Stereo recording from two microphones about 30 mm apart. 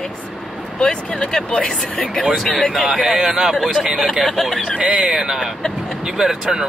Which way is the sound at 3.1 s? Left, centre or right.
Centre.